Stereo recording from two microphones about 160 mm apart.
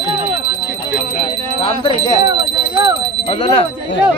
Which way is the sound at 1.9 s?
25° right (ahead or behind).